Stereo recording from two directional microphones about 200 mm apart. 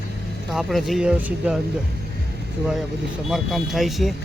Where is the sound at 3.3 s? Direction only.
Centre (ahead or behind).